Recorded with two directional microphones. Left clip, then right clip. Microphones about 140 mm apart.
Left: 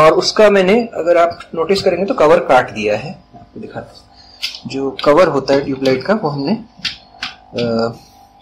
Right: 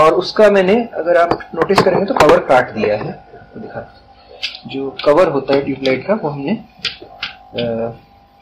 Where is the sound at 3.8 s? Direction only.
20° left (ahead or behind).